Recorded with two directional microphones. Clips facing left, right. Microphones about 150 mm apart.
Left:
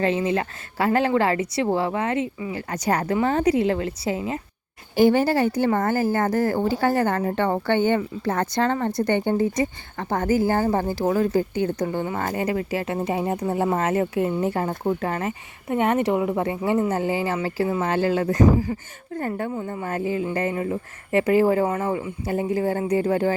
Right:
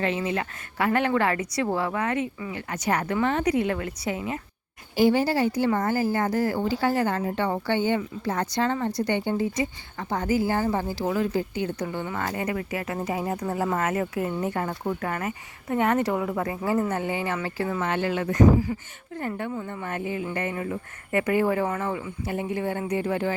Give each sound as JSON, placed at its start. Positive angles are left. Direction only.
{"t": 0.0, "sound": "a woman's voice", "side_deg": 30}
{"t": 4.9, "sound": "a woman's voice", "side_deg": 50}
{"t": 16.9, "sound": "speech", "side_deg": 30}
{"t": 21.8, "sound": "a woman's voice", "side_deg": 20}
{"t": 22.3, "sound": "speech", "side_deg": 35}